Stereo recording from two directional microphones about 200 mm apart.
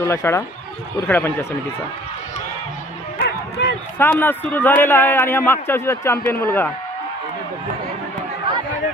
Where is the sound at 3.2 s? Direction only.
60° left (ahead or behind).